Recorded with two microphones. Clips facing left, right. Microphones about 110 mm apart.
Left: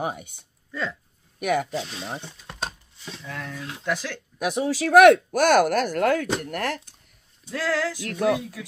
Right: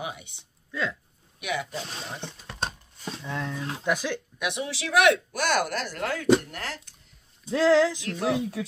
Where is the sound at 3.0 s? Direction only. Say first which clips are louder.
Right 3 dB; 40° right (ahead or behind).